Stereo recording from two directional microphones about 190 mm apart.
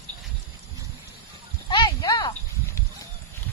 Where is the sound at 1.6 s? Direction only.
25° left (ahead or behind).